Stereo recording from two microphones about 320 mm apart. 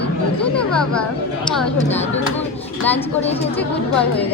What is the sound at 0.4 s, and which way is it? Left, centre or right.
Speech, centre.